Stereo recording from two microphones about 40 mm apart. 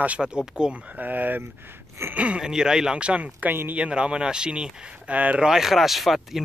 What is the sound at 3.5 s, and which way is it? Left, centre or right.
Speech, right.